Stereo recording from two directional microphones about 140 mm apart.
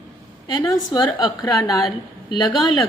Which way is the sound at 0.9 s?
30° left (ahead or behind).